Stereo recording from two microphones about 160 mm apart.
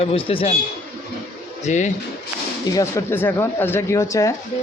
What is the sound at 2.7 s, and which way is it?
Speech, 20° left (ahead or behind).